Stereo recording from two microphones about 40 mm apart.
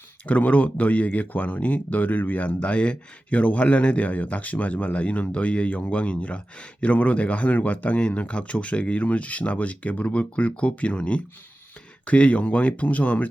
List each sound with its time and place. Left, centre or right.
0.3 s speech: left
2.6 s a man's voice: left